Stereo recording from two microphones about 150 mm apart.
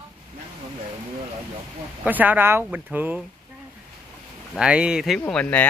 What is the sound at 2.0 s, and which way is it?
Speech, 10° right (ahead or behind).